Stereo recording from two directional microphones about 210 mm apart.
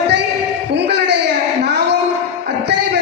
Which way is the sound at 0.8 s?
55° right (ahead or behind).